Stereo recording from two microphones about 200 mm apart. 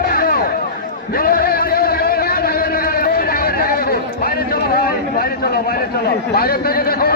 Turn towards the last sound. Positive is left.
turn(degrees=50)  # may be behind; listen again after turning